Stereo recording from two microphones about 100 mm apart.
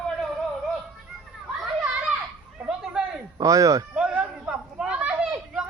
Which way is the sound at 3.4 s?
35° right (ahead or behind).